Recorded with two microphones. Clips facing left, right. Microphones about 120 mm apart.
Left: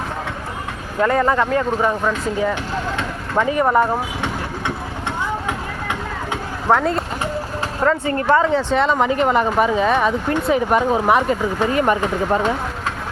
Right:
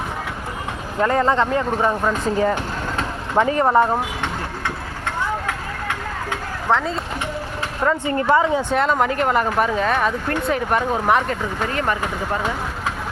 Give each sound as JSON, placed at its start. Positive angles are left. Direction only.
{"t": 1.0, "sound": "speech", "side_deg": -25}
{"t": 2.4, "sound": "vehicle", "side_deg": -40}
{"t": 3.4, "sound": "speech", "side_deg": -20}
{"t": 6.7, "sound": "speech", "side_deg": 5}
{"t": 7.9, "sound": "speech", "side_deg": -15}
{"t": 8.7, "sound": "speech", "side_deg": 0}